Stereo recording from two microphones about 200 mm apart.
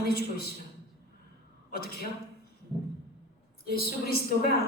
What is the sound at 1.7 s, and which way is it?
Speech, 50° left (ahead or behind).